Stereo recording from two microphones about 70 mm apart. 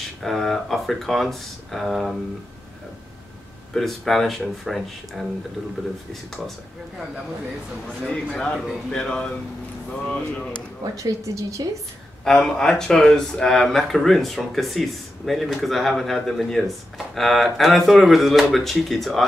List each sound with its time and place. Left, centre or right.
0.2 s speech: centre
3.7 s speech: centre
8.1 s speech: centre
10.8 s a woman's voice: right
12.3 s speech: centre